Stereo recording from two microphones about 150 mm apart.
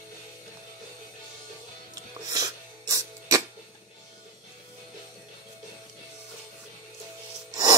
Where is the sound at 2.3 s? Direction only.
25° right (ahead or behind).